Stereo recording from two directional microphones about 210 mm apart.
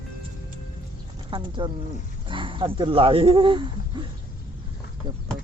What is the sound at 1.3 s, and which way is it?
Speech, 25° right (ahead or behind).